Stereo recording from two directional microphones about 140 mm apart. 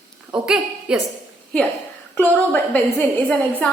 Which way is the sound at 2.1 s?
10° left (ahead or behind).